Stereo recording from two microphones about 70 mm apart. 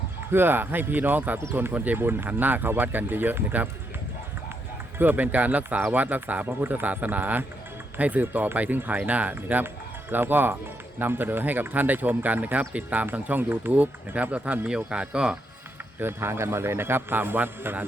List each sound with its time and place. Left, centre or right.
0.3 s speech: right
4.9 s speech: right
16.0 s a man's voice: right